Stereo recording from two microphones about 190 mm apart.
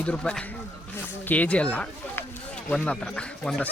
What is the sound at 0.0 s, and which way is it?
Speech, 5° left (ahead or behind).